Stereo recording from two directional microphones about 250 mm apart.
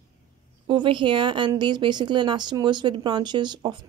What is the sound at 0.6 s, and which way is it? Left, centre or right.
Speech, centre.